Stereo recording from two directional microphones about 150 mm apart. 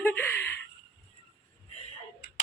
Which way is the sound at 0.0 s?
10° left (ahead or behind).